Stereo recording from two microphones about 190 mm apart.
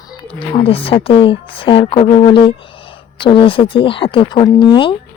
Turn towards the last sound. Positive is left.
turn(degrees=25)  # may be behind; listen again after turning